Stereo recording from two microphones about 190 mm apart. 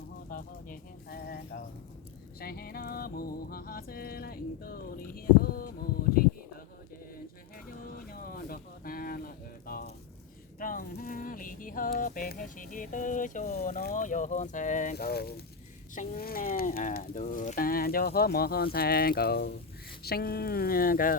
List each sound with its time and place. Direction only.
0.3 s pigeon: 50° left (ahead or behind)
2.4 s music: 50° left (ahead or behind)
7.9 s a sound: 50° left (ahead or behind)
16.0 s speech: 50° left (ahead or behind)